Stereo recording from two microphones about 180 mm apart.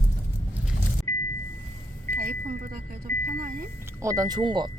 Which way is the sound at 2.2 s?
55° right (ahead or behind).